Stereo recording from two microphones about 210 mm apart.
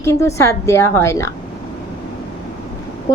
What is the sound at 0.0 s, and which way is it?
Speech, 15° left (ahead or behind).